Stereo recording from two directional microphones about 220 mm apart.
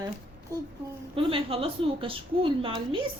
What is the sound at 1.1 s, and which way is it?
A woman's voice, 25° right (ahead or behind).